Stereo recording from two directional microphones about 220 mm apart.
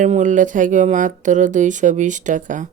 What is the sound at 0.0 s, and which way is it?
Speech, 35° right (ahead or behind).